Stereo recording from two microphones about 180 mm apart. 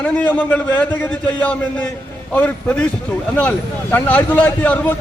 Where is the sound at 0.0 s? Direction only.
10° left (ahead or behind).